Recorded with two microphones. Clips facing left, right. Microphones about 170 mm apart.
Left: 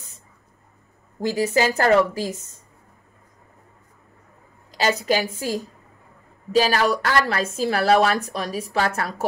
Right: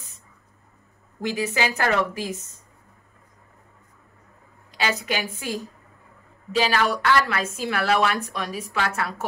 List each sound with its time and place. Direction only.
1.2 s a woman's voice: 35° left (ahead or behind)
4.6 s a woman's voice: 40° left (ahead or behind)